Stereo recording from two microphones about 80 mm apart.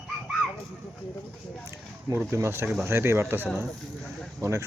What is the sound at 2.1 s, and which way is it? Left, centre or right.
Speech, right.